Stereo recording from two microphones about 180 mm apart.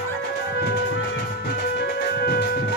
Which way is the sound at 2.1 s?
60° left (ahead or behind).